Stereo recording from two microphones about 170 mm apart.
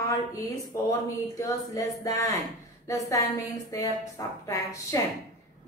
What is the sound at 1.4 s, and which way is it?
A woman's voice, 20° left (ahead or behind).